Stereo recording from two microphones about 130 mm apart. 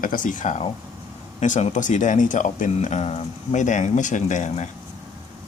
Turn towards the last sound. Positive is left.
turn(degrees=65)  # may be behind; listen again after turning